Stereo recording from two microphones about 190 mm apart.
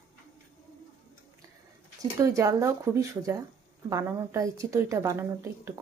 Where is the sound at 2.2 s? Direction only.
15° right (ahead or behind).